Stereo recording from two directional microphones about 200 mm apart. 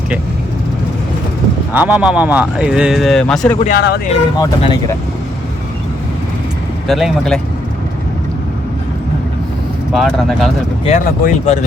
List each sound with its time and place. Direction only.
1.7 s a man's voice: 5° right (ahead or behind)
3.8 s speech: 55° left (ahead or behind)
4.4 s speech: 20° left (ahead or behind)
6.8 s a man's voice: centre (ahead or behind)
9.9 s a man's voice: centre (ahead or behind)
10.8 s speech: 40° left (ahead or behind)